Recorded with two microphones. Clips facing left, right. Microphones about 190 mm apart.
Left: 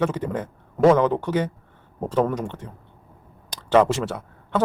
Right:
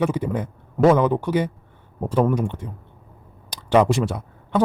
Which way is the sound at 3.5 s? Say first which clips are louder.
Right 1 dB; 15° right (ahead or behind).